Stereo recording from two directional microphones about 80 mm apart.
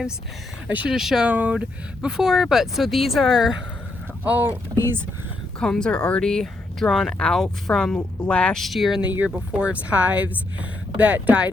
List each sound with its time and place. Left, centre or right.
0.9 s speech: centre
1.3 s speech: centre
4.2 s speech: right
5.5 s speech: centre
8.6 s speech: centre
9.0 s speech: right